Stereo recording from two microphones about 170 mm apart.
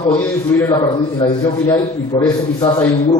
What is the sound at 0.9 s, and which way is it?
A man's voice, 30° left (ahead or behind).